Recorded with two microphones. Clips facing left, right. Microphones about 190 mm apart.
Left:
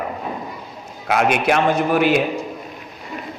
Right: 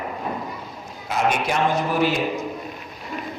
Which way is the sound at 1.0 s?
70° left (ahead or behind).